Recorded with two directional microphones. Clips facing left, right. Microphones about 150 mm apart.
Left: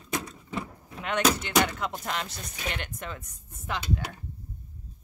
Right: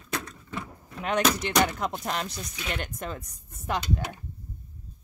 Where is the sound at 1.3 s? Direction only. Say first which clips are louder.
Right 1 dB; 35° right (ahead or behind).